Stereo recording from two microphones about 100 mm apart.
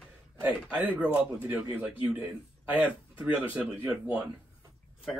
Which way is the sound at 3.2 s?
25° right (ahead or behind).